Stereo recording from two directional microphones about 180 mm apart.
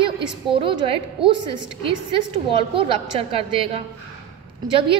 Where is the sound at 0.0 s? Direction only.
30° right (ahead or behind).